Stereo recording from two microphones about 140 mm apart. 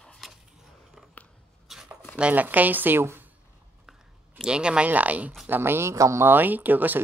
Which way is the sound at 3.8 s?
5° right (ahead or behind).